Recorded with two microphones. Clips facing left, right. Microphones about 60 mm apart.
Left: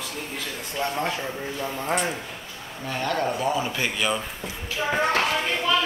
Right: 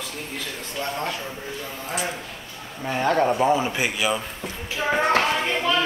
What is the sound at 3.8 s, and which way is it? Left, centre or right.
Speech, centre.